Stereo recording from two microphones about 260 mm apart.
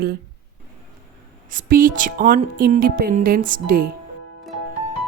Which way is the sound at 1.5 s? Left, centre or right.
Right.